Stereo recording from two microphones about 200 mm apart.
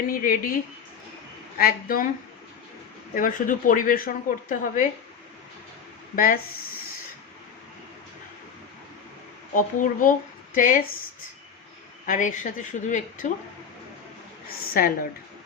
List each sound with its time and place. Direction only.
0.1 s a woman's voice: 45° left (ahead or behind)
1.5 s a woman's voice: 45° left (ahead or behind)
3.2 s a woman's voice: 40° left (ahead or behind)
6.1 s a woman's voice: 45° left (ahead or behind)
9.6 s a woman's voice: 45° left (ahead or behind)
12.0 s speech: 40° left (ahead or behind)
14.7 s a woman's voice: 45° left (ahead or behind)